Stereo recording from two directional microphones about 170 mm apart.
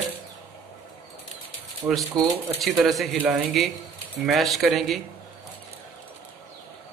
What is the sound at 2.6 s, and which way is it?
A man's voice, centre (ahead or behind).